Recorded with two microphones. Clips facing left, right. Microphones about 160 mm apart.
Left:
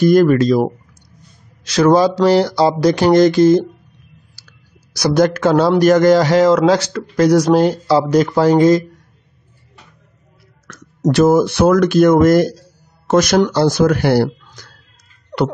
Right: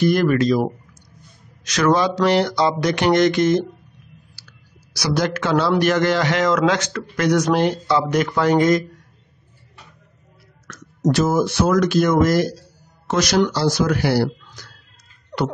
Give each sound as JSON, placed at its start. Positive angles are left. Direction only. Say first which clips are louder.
{"t": 0.0, "sound": "speech", "louder": "left 6 dB", "side_deg": 40}
{"t": 1.7, "sound": "speech", "louder": "left 6 dB", "side_deg": 35}
{"t": 4.4, "sound": "speech", "louder": "left 1 dB", "side_deg": 45}
{"t": 10.7, "sound": "speech", "louder": "left 3 dB", "side_deg": 60}